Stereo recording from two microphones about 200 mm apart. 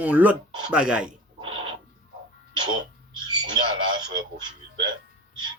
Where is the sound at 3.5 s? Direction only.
20° right (ahead or behind).